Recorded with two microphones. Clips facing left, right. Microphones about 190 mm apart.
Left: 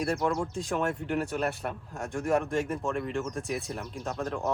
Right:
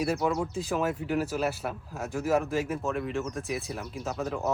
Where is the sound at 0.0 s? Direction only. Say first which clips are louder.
Right 1 dB; 5° right (ahead or behind).